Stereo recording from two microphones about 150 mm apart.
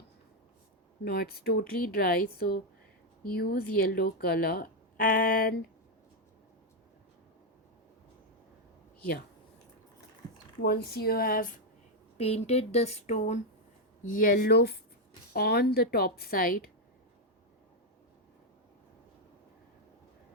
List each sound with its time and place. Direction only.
1.0 s speech: 90° left
10.6 s speech: 90° left; by 11.5 s 70° left (ahead or behind)
12.1 s speech: 45° left (ahead or behind)
14.1 s speech: 70° left (ahead or behind)